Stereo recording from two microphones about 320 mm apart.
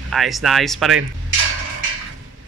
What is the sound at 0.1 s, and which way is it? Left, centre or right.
Speech, centre.